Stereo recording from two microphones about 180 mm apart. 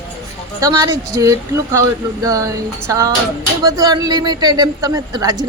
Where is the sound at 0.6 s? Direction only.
20° right (ahead or behind).